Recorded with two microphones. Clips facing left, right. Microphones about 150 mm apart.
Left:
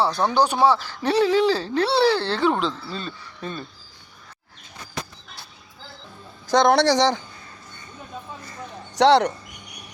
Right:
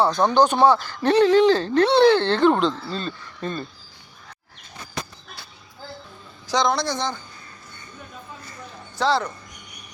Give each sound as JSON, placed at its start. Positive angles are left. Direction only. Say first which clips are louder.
{"t": 0.3, "sound": "speech", "louder": "right 2 dB", "side_deg": 10}
{"t": 6.5, "sound": "speech", "louder": "left 5 dB", "side_deg": 60}
{"t": 9.0, "sound": "speech", "louder": "left 6 dB", "side_deg": 70}